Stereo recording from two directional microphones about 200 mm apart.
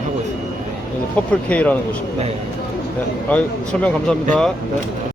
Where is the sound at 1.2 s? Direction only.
5° left (ahead or behind).